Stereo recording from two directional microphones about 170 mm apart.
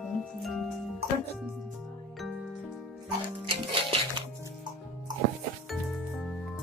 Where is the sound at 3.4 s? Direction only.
30° right (ahead or behind).